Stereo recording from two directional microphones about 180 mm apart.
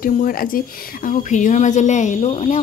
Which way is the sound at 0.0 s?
50° left (ahead or behind).